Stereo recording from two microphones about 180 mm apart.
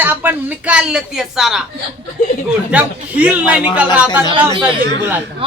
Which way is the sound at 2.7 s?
10° right (ahead or behind).